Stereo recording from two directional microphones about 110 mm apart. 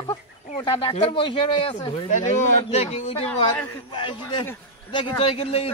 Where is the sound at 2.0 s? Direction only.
90° left; by 3.2 s 75° left (ahead or behind).